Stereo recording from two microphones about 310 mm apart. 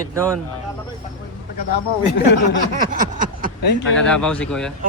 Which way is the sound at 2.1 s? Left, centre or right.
Left.